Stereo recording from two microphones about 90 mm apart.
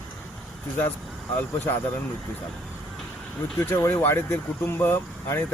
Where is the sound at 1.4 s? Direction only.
20° left (ahead or behind).